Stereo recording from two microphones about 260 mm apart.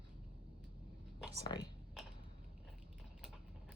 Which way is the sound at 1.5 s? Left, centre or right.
Centre.